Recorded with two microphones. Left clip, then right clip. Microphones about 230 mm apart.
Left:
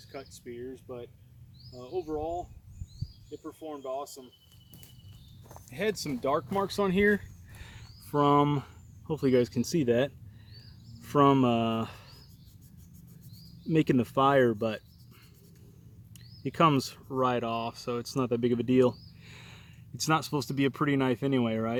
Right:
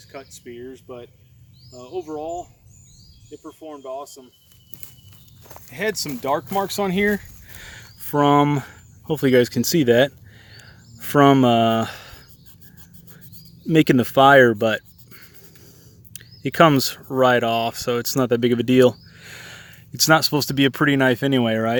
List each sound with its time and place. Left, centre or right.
0.1 s speech: centre
5.5 s speech: centre; by 10.1 s right
10.6 s a sound: right
13.7 s speech: right